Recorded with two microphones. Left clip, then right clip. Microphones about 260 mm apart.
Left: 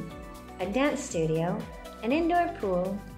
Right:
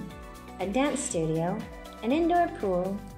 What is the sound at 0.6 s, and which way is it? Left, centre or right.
A woman's voice, right.